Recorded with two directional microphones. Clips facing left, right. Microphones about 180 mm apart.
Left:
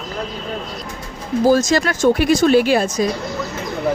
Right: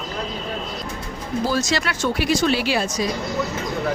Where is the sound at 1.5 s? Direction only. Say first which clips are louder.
Left 10 dB; 45° left (ahead or behind).